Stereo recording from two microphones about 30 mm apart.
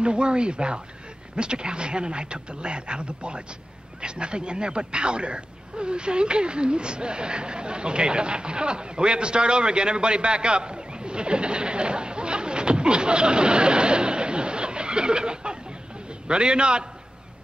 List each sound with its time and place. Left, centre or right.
0.0 s a man's voice: right